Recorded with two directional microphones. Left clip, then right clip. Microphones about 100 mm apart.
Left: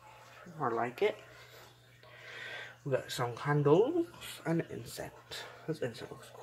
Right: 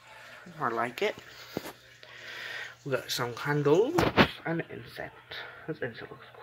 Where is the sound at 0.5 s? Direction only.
Centre (ahead or behind).